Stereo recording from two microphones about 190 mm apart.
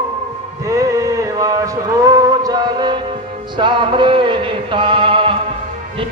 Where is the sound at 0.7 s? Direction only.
15° right (ahead or behind).